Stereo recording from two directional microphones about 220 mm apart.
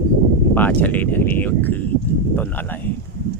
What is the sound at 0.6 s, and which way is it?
Speech, 5° left (ahead or behind).